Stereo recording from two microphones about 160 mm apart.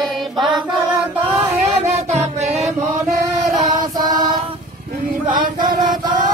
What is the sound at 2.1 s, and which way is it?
Music, 40° right (ahead or behind).